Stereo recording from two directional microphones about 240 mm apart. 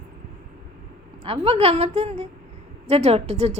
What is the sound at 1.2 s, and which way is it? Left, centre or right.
A woman's voice, right.